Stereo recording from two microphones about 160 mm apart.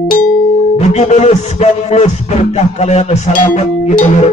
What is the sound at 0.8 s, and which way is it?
Music, 45° left (ahead or behind).